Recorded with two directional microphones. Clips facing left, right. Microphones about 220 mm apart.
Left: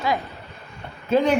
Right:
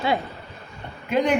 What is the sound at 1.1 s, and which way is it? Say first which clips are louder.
Speech: left 2 dB; 15° right (ahead or behind).